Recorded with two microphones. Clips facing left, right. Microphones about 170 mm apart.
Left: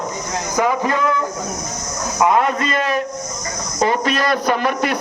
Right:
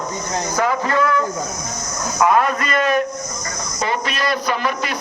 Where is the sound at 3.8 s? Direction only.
45° left (ahead or behind).